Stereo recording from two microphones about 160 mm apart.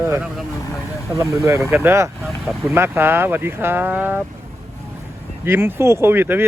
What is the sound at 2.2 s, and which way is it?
Speech, centre (ahead or behind).